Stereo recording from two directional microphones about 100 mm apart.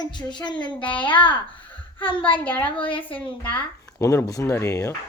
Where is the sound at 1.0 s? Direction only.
55° left (ahead or behind).